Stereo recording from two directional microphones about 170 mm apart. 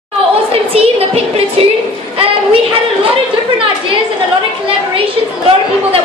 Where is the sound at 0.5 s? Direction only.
35° right (ahead or behind).